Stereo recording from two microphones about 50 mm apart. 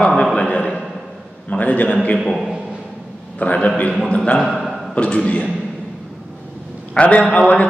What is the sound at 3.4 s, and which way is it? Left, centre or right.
A man's voice, left.